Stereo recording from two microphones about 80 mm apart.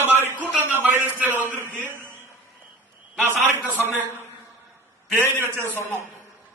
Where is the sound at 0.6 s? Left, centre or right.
Right.